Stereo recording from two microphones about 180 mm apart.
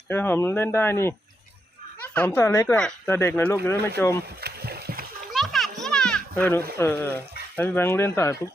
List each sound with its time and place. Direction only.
0.1 s speech: 10° left (ahead or behind)
2.1 s speech: 10° left (ahead or behind)
4.4 s rowboat: 60° right (ahead or behind)
5.3 s music: centre (ahead or behind)
5.8 s children playing: 5° left (ahead or behind)
6.7 s speech: 10° left (ahead or behind)